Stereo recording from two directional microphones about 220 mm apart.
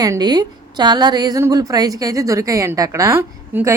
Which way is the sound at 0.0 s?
15° right (ahead or behind).